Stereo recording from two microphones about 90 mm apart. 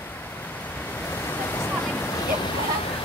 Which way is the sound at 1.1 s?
25° left (ahead or behind).